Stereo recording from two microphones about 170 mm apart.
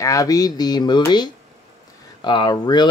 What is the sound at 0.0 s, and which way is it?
Speech, 20° left (ahead or behind).